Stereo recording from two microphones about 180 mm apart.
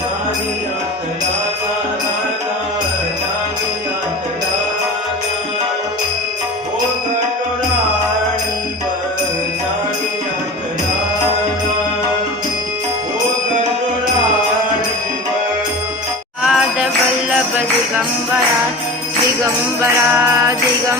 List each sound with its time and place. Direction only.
16.4 s music: centre (ahead or behind)
19.8 s music: 15° right (ahead or behind)